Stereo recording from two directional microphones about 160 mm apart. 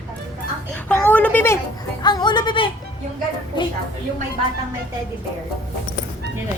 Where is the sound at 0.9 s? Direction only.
10° left (ahead or behind).